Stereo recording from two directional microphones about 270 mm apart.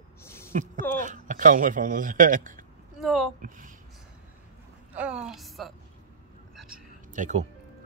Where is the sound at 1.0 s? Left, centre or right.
Right.